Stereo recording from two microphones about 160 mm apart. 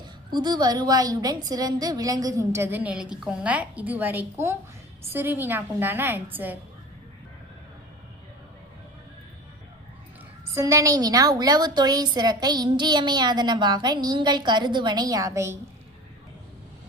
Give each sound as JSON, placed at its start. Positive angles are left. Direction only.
{"t": 0.3, "sound": "a woman's voice", "side_deg": -25}
{"t": 10.5, "sound": "a woman's voice", "side_deg": -20}